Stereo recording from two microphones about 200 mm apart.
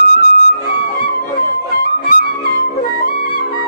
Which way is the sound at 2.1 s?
45° left (ahead or behind).